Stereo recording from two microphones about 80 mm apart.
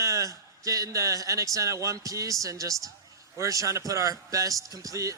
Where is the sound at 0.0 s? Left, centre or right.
Right.